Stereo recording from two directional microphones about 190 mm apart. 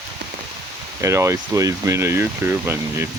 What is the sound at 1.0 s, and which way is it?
Speech, 15° right (ahead or behind).